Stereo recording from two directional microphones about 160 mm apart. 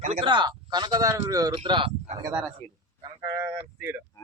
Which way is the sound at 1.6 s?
35° right (ahead or behind).